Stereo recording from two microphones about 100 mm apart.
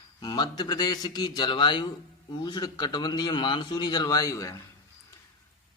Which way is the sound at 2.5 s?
45° left (ahead or behind).